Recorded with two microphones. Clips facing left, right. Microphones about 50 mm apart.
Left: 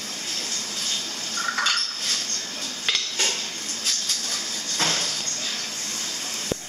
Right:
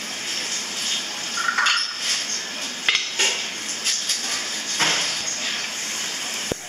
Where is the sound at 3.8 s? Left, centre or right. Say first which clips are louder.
Right 2 dB; right.